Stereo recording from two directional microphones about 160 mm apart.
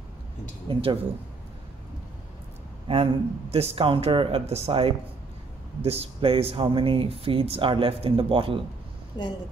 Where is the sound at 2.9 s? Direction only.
35° right (ahead or behind).